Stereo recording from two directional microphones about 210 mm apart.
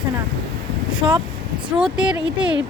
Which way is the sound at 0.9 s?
20° right (ahead or behind).